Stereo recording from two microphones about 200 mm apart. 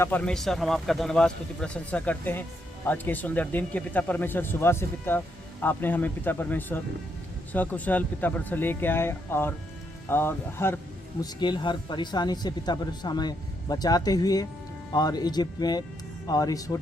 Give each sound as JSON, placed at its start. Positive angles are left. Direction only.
{"t": 0.0, "sound": "a man's voice", "side_deg": 10}